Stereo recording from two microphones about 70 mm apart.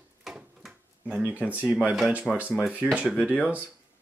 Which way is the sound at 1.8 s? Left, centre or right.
Centre.